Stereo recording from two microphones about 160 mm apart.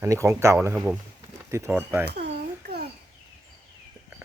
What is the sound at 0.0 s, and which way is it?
Speech, 15° right (ahead or behind).